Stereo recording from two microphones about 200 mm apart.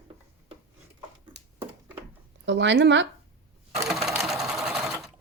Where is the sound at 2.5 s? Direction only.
65° right (ahead or behind).